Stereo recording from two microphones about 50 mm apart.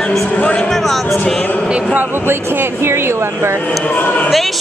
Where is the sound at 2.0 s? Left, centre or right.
Right.